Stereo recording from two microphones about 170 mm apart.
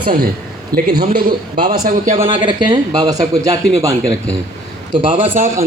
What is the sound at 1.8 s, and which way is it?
Speech, 50° right (ahead or behind).